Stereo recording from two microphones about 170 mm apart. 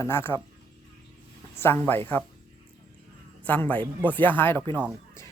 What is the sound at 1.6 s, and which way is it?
Speech, 15° left (ahead or behind).